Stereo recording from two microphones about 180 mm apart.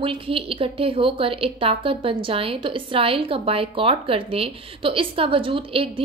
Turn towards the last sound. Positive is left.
turn(degrees=-30)  # may be behind; listen again after turning